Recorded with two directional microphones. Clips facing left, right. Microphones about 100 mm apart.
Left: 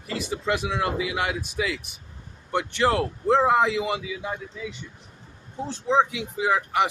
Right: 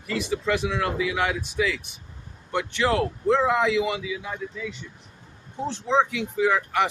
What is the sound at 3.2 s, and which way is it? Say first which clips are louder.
Speech: left 2 dB; 25° left (ahead or behind).